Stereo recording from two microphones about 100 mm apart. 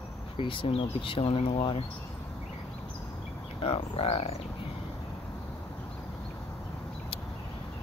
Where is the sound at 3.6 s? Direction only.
80° left.